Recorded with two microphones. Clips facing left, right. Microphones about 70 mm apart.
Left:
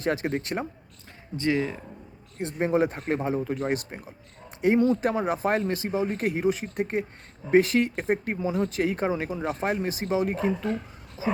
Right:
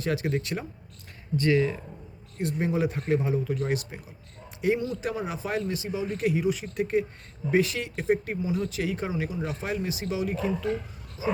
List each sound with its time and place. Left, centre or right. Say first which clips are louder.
0.0 s speech: left 1 dB; left
1.4 s speech: right 2 dB; left
4.8 s speech: left 7 dB; left
11.2 s speech: left 1 dB; left